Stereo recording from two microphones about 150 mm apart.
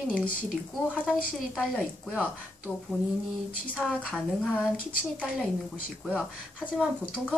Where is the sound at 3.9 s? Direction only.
Centre (ahead or behind).